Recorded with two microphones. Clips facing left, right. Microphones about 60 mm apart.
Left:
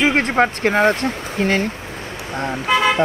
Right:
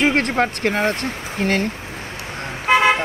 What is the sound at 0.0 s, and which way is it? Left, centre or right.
Speech, centre.